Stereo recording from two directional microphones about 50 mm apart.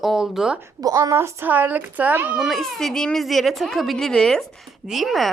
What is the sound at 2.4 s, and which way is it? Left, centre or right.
A woman's voice, centre.